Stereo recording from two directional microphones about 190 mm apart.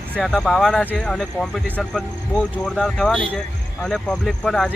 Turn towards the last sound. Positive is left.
turn(degrees=5)  # may be behind; listen again after turning